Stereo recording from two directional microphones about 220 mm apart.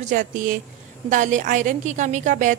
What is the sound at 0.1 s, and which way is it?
A woman's voice, 35° right (ahead or behind).